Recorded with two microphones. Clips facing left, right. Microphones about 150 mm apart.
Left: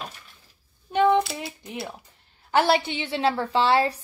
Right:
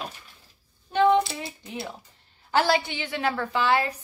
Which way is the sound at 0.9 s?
15° left (ahead or behind).